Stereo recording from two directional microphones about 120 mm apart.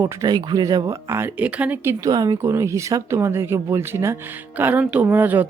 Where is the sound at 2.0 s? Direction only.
35° right (ahead or behind).